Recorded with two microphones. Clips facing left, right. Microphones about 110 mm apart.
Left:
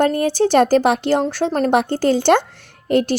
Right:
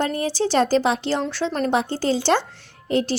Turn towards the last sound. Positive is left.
turn(degrees=55)  # may be behind; listen again after turning